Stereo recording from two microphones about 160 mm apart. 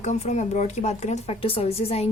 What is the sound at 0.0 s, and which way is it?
Speech, 45° left (ahead or behind).